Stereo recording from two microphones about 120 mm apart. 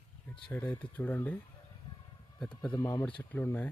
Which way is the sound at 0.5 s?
15° left (ahead or behind).